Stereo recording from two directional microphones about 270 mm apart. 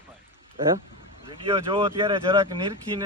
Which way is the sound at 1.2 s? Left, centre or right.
Centre.